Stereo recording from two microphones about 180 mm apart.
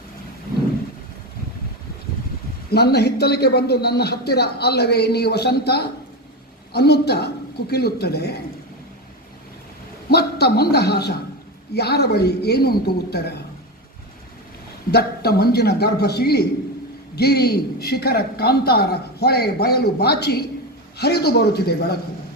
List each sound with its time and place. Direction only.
2.7 s a man's voice: 65° left (ahead or behind)
10.1 s a man's voice: 65° left (ahead or behind)
14.8 s a man's voice: 60° left (ahead or behind)